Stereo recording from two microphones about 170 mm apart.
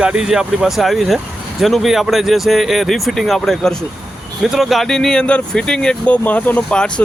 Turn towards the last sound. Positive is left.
turn(degrees=10)  # may be behind; listen again after turning